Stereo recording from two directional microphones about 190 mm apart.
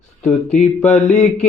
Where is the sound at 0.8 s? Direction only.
35° left (ahead or behind).